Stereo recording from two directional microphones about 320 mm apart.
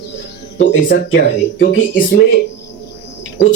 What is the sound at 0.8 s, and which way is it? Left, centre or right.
Speech, left.